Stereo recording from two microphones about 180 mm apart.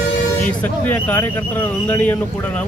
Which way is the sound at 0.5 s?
10° left (ahead or behind).